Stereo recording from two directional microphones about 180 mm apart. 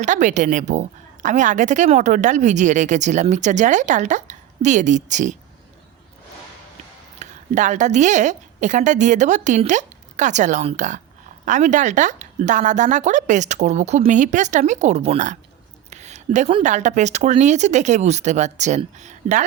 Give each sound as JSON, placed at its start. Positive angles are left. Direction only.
{"t": 0.0, "sound": "a woman's voice", "side_deg": -45}
{"t": 7.2, "sound": "a woman's voice", "side_deg": -40}
{"t": 15.9, "sound": "a sound", "side_deg": -40}
{"t": 16.6, "sound": "speech", "side_deg": -40}